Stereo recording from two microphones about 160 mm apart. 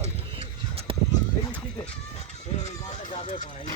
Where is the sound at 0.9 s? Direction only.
35° right (ahead or behind).